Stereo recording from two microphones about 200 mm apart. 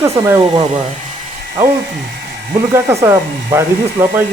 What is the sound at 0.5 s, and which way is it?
Speech, 30° right (ahead or behind).